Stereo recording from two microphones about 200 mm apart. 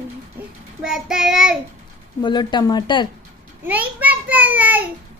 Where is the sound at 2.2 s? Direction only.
20° left (ahead or behind).